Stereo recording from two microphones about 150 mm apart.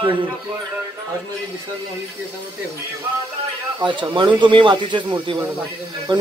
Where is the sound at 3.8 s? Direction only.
30° right (ahead or behind).